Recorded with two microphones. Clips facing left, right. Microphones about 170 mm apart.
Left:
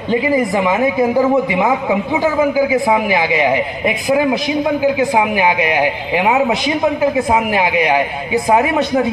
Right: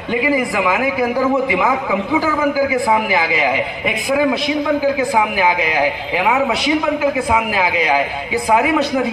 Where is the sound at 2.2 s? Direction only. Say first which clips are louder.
Left 3 dB; 25° left (ahead or behind).